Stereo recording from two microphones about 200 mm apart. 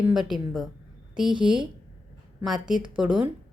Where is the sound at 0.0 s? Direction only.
Centre (ahead or behind).